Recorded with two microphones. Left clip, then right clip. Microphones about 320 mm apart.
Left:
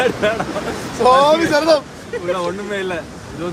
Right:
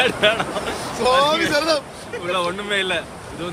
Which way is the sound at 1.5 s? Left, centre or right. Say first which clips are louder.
Left 5 dB; centre.